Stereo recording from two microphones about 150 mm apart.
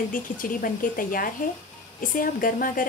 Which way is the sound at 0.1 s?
65° left (ahead or behind).